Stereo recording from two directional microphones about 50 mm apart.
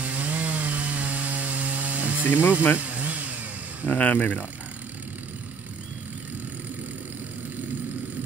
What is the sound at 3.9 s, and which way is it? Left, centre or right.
Speech, left.